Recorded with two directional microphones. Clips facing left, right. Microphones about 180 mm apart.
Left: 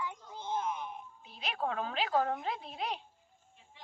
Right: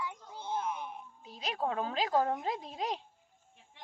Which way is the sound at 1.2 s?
40° right (ahead or behind).